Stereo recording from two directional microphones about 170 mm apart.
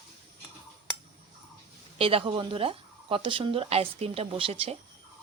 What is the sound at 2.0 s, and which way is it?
Speech, 35° right (ahead or behind).